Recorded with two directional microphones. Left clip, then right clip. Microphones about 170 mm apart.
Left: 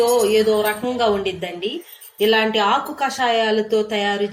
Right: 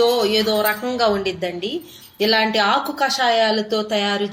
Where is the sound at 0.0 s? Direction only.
25° right (ahead or behind).